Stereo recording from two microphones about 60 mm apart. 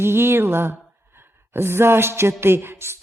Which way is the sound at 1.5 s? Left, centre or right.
Right.